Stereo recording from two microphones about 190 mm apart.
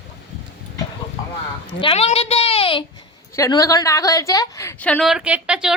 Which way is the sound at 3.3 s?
15° left (ahead or behind).